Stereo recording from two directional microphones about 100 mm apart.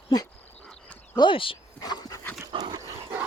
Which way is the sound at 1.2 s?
60° left (ahead or behind).